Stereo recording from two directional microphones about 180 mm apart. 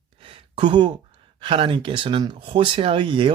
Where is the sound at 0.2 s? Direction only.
30° right (ahead or behind).